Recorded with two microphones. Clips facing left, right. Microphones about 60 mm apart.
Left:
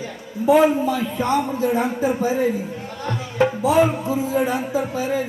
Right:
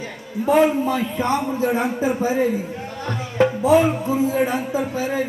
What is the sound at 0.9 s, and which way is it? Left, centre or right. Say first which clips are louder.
Speech: even; right.